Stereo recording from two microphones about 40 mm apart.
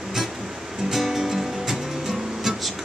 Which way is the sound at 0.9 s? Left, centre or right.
Centre.